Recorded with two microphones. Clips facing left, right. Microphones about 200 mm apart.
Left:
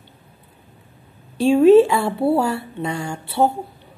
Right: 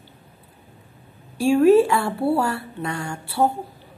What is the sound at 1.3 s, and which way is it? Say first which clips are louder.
Speech: left 3 dB; 20° left (ahead or behind).